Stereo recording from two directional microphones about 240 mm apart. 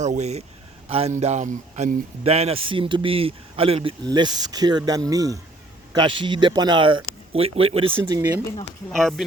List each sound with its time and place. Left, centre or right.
0.0 s speech: right
8.9 s speech: centre